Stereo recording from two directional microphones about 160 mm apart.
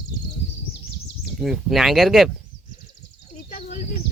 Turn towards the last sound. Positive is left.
turn(degrees=45)  # may be behind; listen again after turning